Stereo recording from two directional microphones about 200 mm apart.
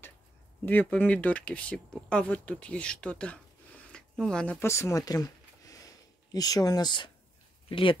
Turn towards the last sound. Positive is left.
turn(degrees=25)  # may be behind; listen again after turning